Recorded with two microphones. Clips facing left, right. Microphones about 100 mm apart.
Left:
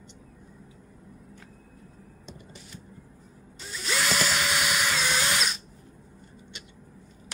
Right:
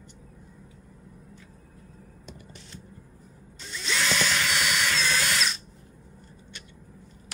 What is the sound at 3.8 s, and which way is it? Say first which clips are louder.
Drill: even; 5° left (ahead or behind).